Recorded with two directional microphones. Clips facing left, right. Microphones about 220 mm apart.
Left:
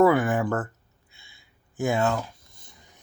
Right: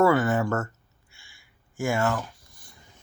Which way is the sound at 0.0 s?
15° left (ahead or behind).